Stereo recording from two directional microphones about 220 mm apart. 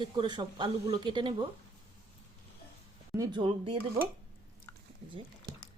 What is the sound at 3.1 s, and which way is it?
Speech, 20° right (ahead or behind).